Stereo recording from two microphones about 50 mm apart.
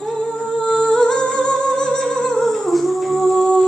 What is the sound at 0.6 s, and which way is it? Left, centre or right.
Music, centre.